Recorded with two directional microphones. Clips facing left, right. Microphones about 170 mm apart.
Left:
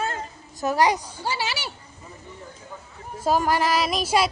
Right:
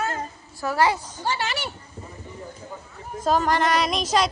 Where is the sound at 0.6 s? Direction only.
15° left (ahead or behind).